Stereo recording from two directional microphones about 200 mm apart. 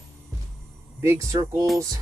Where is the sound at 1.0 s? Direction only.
15° right (ahead or behind).